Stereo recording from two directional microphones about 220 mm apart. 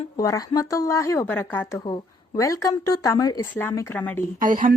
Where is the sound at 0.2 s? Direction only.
15° left (ahead or behind).